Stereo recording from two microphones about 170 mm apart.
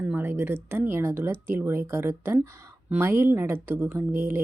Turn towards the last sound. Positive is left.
turn(degrees=-15)  # may be behind; listen again after turning